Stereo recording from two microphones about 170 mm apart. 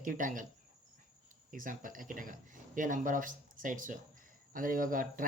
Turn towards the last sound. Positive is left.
turn(degrees=-55)  # may be behind; listen again after turning